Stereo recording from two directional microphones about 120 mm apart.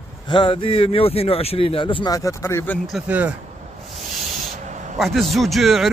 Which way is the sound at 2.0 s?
30° left (ahead or behind).